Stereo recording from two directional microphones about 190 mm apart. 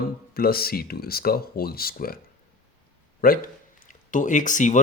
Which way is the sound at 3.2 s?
50° left (ahead or behind).